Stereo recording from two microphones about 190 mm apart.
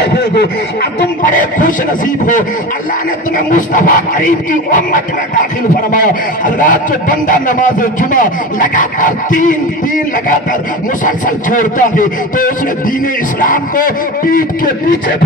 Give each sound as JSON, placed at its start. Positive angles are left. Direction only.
{"t": 0.0, "sound": "snicker", "side_deg": 60}
{"t": 1.2, "sound": "speech", "side_deg": 45}